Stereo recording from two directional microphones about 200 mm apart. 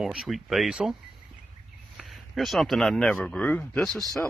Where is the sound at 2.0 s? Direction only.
Centre (ahead or behind).